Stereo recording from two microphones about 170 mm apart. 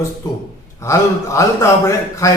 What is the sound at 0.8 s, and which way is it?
A man's voice, 15° left (ahead or behind).